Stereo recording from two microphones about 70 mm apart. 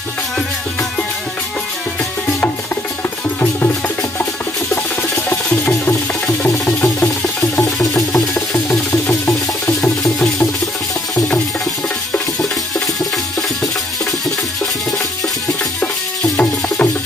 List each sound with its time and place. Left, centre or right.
5.1 s music: centre
8.9 s music: left
9.8 s music: centre
12.1 s music: centre
16.3 s music: left